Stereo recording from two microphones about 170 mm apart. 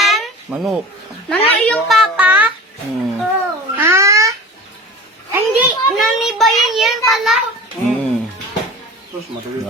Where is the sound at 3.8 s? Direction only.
15° right (ahead or behind).